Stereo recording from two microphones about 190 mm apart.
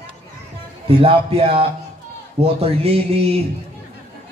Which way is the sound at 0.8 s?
30° right (ahead or behind).